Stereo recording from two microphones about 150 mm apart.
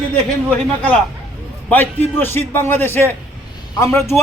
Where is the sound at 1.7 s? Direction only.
10° left (ahead or behind).